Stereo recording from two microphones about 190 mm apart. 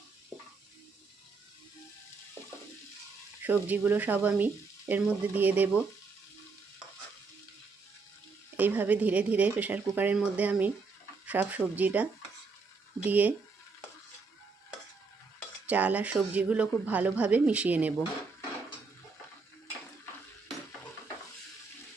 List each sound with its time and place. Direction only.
3.4 s dishes: 10° right (ahead or behind)
8.5 s dishes: 10° right (ahead or behind)
13.1 s dishes: 10° right (ahead or behind)
15.4 s dishes: 5° right (ahead or behind)